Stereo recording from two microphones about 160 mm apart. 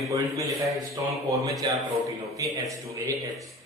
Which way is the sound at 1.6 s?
25° right (ahead or behind).